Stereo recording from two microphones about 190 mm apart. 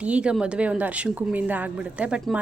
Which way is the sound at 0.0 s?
5° right (ahead or behind).